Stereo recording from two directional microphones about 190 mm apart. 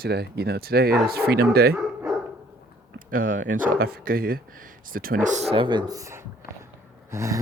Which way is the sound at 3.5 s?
45° right (ahead or behind).